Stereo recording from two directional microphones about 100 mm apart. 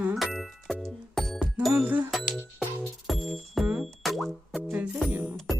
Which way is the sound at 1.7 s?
15° right (ahead or behind).